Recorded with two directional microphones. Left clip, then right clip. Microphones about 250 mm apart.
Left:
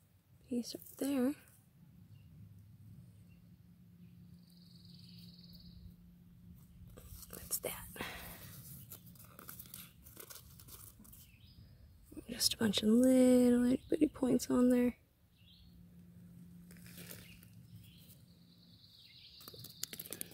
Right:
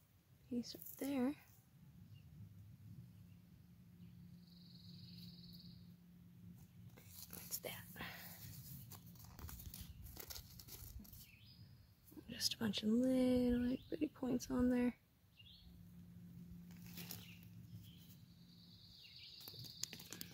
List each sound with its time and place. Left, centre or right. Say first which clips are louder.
0.5 s a woman's voice: left 6 dB; centre
7.2 s whispering: left 7 dB; centre
9.4 s tearing: left 4 dB; centre
12.3 s speech: left 7 dB; left